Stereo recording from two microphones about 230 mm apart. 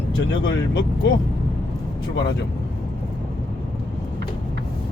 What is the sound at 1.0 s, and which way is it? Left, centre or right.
Speech, left.